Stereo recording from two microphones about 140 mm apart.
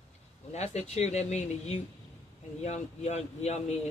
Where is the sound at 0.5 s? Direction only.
50° left (ahead or behind).